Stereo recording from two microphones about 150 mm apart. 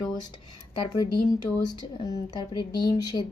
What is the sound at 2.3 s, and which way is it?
Speech, 30° left (ahead or behind).